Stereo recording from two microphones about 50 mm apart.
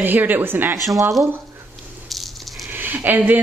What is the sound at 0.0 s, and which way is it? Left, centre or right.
Speech, right.